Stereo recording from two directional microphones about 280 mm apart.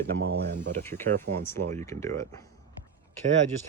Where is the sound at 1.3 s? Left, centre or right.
Right.